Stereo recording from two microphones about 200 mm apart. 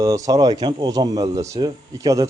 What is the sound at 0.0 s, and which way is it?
Speech, 20° right (ahead or behind).